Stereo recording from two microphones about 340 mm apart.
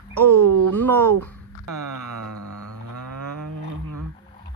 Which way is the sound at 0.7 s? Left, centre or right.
Centre.